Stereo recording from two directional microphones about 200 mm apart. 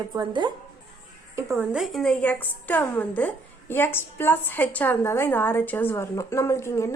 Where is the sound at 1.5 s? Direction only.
Centre (ahead or behind).